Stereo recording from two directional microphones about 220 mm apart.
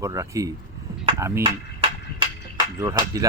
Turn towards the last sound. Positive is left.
turn(degrees=-15)  # may be behind; listen again after turning